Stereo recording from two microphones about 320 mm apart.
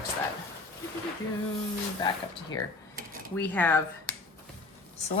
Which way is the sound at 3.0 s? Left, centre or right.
Right.